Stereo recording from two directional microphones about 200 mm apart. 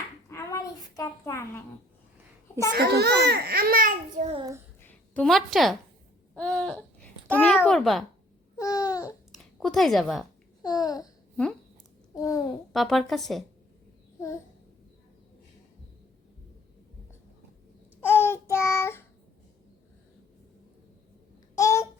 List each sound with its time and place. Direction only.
0.3 s a sound: 15° left (ahead or behind)
2.7 s a child's voice: 55° right (ahead or behind); by 4.4 s 40° right (ahead or behind)
4.4 s a child's voice: 20° right (ahead or behind)
4.8 s a sound: 10° left (ahead or behind)
6.3 s a child's voice: 5° left (ahead or behind)
8.5 s babbling: 20° left (ahead or behind)
9.0 s a sound: centre (ahead or behind)
10.6 s babbling: 20° left (ahead or behind)
12.1 s a child's voice: 15° left (ahead or behind)
12.7 s a child's voice: centre (ahead or behind)
18.0 s child singing: 10° left (ahead or behind)
21.5 s babbling: 15° left (ahead or behind)